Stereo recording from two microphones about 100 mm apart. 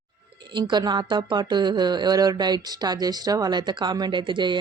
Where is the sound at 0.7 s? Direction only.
50° right (ahead or behind).